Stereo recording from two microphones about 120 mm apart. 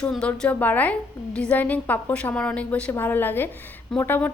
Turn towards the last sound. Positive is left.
turn(degrees=15)  # may be behind; listen again after turning